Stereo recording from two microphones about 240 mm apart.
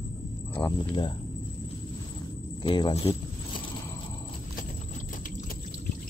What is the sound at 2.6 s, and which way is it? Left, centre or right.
Speech, centre.